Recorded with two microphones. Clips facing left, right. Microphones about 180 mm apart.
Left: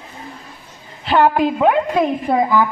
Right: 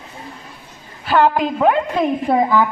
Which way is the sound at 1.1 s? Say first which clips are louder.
Left 1 dB; 10° left (ahead or behind).